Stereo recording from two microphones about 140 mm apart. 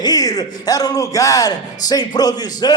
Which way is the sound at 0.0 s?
25° left (ahead or behind).